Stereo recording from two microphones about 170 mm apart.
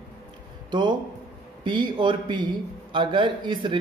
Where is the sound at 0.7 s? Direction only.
25° right (ahead or behind).